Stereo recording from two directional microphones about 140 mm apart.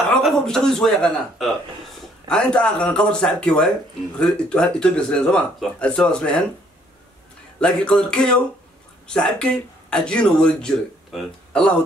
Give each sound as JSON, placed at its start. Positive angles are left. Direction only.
{"t": 0.1, "sound": "speech", "side_deg": 0}
{"t": 7.6, "sound": "speech", "side_deg": 5}